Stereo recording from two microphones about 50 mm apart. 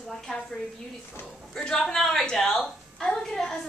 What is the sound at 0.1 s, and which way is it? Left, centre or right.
A woman's voice, centre.